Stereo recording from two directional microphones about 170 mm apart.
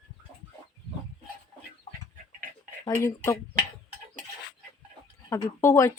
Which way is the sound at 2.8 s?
15° left (ahead or behind).